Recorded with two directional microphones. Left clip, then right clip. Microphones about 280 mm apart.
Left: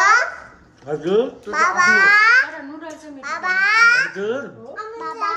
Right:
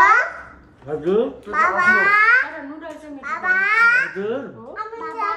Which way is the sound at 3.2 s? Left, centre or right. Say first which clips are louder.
Even; centre.